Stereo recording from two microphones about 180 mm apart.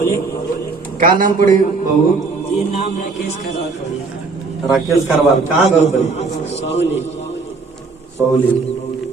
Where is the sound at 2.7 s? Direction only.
40° left (ahead or behind).